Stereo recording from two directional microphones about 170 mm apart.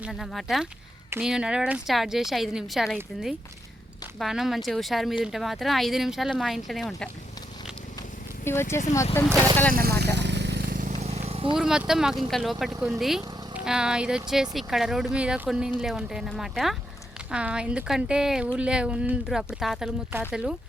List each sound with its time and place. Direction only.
0.0 s speech: centre (ahead or behind)
8.4 s speech: 15° left (ahead or behind)
9.7 s vehicle: 70° right (ahead or behind); by 11.5 s 35° right (ahead or behind)
11.5 s speech: 5° right (ahead or behind)